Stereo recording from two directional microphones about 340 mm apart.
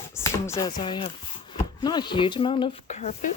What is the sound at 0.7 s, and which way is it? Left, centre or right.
Speech, centre.